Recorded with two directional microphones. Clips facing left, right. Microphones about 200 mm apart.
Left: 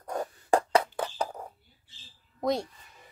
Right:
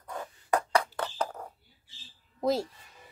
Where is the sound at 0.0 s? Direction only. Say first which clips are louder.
Left 6 dB; 45° left (ahead or behind).